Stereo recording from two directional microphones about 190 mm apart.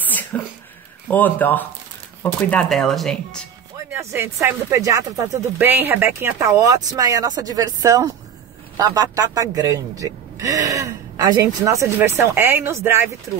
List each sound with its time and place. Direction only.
0.1 s a sound: 10° left (ahead or behind)
1.1 s speech: 10° left (ahead or behind)
3.7 s speech: 15° right (ahead or behind)